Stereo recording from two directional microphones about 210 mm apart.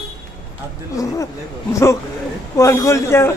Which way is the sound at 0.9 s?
15° left (ahead or behind).